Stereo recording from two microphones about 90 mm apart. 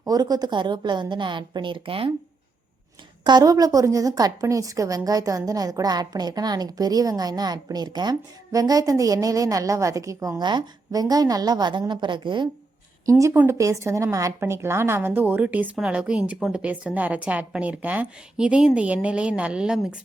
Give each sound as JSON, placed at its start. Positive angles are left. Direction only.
{"t": 0.0, "sound": "a woman's voice", "side_deg": -45}
{"t": 3.2, "sound": "a woman's voice", "side_deg": -50}
{"t": 10.4, "sound": "a woman's voice", "side_deg": -50}
{"t": 13.1, "sound": "a woman's voice", "side_deg": -35}
{"t": 13.3, "sound": "speech", "side_deg": -25}
{"t": 13.6, "sound": "a woman's voice", "side_deg": -35}